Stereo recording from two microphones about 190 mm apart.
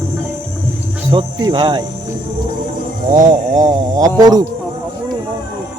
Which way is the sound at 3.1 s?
45° right (ahead or behind).